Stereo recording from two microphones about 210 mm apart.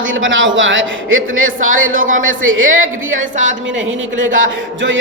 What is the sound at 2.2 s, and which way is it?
Speech, 70° right (ahead or behind).